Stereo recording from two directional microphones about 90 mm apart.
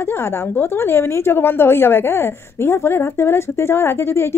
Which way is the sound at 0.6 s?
25° left (ahead or behind).